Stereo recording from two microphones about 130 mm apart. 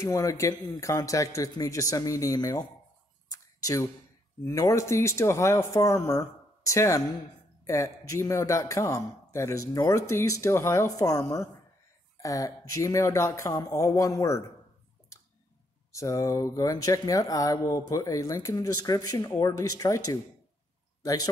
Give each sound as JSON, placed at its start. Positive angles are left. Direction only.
{"t": 0.0, "sound": "speech", "side_deg": 25}
{"t": 3.3, "sound": "a sound", "side_deg": 25}
{"t": 4.5, "sound": "speech", "side_deg": 25}
{"t": 15.9, "sound": "speech", "side_deg": 25}